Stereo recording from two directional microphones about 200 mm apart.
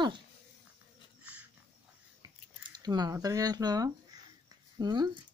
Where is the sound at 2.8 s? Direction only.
20° right (ahead or behind).